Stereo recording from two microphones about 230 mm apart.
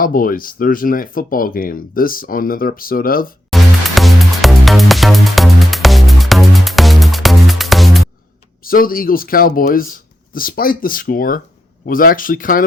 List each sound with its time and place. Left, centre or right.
0.0 s speech: left
3.5 s music: centre
8.6 s speech: left